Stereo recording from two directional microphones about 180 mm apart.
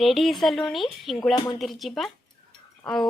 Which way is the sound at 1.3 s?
25° left (ahead or behind).